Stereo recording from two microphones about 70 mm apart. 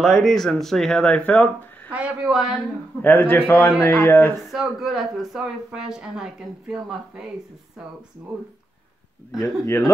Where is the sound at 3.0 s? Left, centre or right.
Left.